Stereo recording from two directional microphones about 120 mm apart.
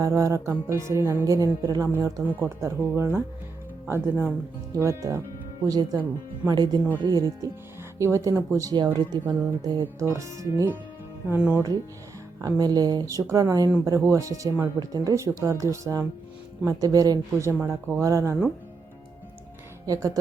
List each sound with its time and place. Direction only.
0.0 s speech: 25° right (ahead or behind)
2.2 s speech: 20° right (ahead or behind)
4.7 s speech: 25° right (ahead or behind)
9.2 s speech: 20° right (ahead or behind)
11.3 s speech: 15° right (ahead or behind)
12.4 s speech: 30° right (ahead or behind)
17.5 s speech: 15° right (ahead or behind)
19.8 s speech: 30° right (ahead or behind)